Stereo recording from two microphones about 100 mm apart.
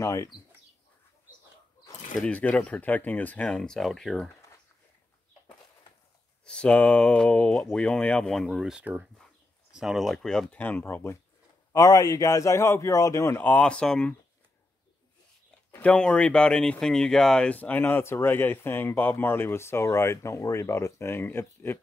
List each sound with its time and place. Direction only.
0.0 s speech: 30° left (ahead or behind)
2.1 s speech: 10° left (ahead or behind)
6.4 s speech: 10° left (ahead or behind)
11.7 s a man's voice: 35° left (ahead or behind)
13.4 s speech: 15° left (ahead or behind)
15.7 s speech: 10° left (ahead or behind)